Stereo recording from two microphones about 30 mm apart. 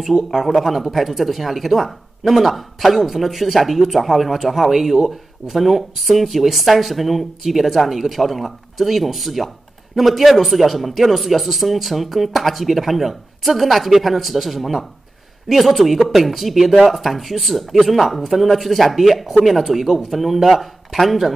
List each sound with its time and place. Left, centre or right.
0.0 s speech: centre